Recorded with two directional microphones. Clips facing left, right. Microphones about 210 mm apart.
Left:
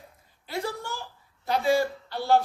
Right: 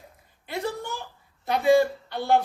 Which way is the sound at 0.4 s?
20° right (ahead or behind).